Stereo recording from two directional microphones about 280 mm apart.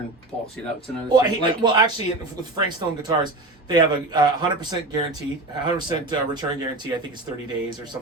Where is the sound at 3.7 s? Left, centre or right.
Centre.